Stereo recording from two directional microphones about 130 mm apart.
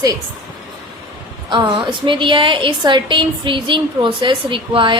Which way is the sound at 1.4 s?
35° right (ahead or behind).